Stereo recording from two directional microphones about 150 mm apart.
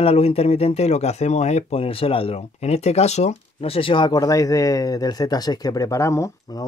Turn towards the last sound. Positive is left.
turn(degrees=20)  # may be behind; listen again after turning